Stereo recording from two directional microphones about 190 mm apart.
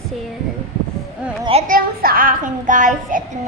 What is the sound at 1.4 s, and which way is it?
Children playing, 30° right (ahead or behind).